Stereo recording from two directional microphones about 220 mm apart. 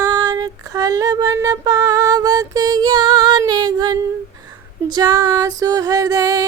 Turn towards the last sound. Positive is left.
turn(degrees=-15)  # may be behind; listen again after turning